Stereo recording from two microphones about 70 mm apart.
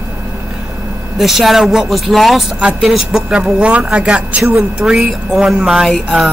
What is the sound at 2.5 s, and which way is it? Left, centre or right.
Speech, centre.